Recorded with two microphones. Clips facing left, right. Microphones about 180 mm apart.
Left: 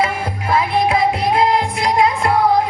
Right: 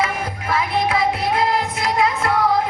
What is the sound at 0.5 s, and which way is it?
Music, 25° left (ahead or behind).